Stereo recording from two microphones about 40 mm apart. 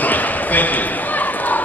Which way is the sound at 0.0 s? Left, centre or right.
Left.